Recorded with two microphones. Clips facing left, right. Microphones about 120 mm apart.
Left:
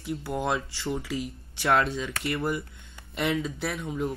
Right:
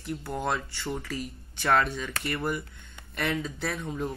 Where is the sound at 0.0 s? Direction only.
5° left (ahead or behind).